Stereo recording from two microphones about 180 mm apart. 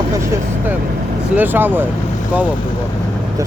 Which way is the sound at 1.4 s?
10° right (ahead or behind).